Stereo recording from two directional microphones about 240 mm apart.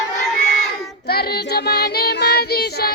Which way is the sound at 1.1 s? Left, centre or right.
Left.